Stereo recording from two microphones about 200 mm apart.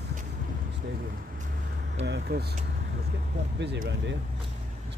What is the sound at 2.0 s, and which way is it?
Speech, 55° right (ahead or behind).